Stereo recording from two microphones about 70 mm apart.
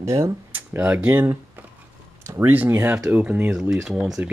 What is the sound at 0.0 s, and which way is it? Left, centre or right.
Speech, right.